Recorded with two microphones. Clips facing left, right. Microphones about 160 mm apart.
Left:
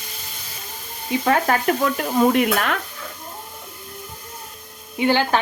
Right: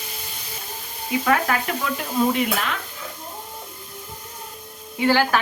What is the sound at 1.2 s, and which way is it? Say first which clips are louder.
Stir: left 2 dB; 35° left (ahead or behind).